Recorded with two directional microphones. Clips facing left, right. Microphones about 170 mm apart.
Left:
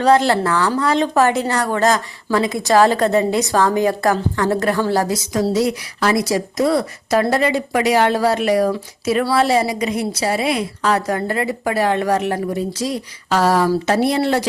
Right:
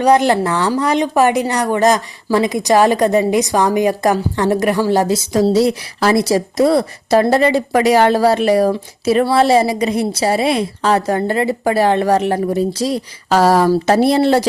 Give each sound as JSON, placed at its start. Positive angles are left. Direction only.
{"t": 0.0, "sound": "speech", "side_deg": -15}